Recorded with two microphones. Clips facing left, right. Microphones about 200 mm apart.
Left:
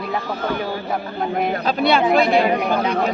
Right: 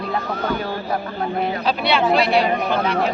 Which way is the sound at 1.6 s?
45° left (ahead or behind).